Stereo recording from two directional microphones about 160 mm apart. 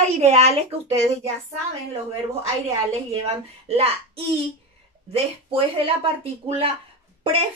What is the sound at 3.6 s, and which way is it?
Speech, 40° right (ahead or behind).